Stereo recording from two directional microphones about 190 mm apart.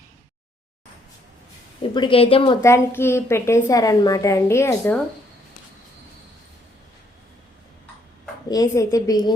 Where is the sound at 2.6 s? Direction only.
15° left (ahead or behind).